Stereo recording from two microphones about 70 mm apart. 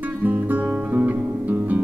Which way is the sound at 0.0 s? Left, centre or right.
Right.